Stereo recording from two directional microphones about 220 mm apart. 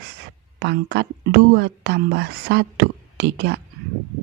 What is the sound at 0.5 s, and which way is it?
Speech, 50° right (ahead or behind).